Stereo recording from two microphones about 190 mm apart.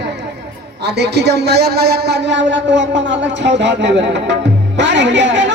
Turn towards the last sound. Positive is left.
turn(degrees=-70)  # may be behind; listen again after turning